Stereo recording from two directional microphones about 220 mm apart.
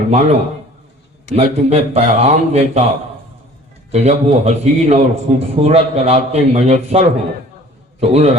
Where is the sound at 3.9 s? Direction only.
30° right (ahead or behind).